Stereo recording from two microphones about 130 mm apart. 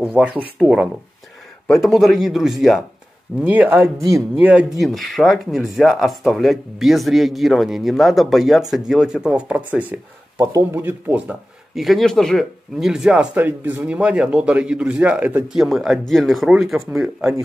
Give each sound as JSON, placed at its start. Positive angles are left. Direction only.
{"t": 0.0, "sound": "speech", "side_deg": -10}
{"t": 2.0, "sound": "speech", "side_deg": 0}
{"t": 3.3, "sound": "speech", "side_deg": -15}
{"t": 11.7, "sound": "speech", "side_deg": 0}